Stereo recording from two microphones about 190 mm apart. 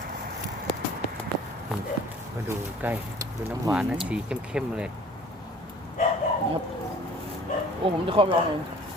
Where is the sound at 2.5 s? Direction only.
10° right (ahead or behind).